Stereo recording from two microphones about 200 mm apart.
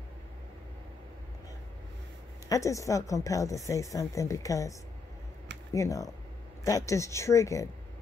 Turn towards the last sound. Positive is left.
turn(degrees=15)  # may be behind; listen again after turning